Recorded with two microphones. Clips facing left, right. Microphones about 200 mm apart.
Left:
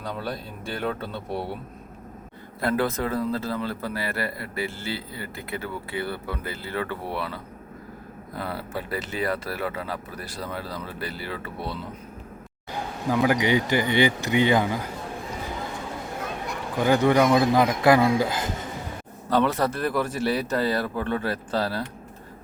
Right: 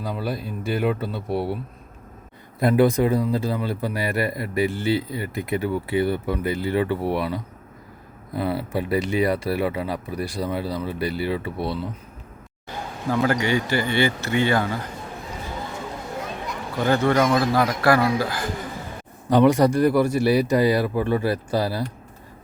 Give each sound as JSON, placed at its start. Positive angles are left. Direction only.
{"t": 0.0, "sound": "a man's voice", "side_deg": -5}
{"t": 2.6, "sound": "a man's voice", "side_deg": -15}
{"t": 13.2, "sound": "speech", "side_deg": 15}
{"t": 16.7, "sound": "a man's voice", "side_deg": 15}
{"t": 19.3, "sound": "a man's voice", "side_deg": -15}